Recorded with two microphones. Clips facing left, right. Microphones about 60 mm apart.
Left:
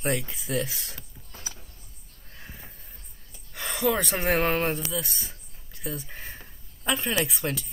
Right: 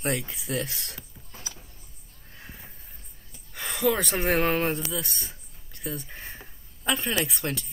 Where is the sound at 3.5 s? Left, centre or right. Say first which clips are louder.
Even; centre.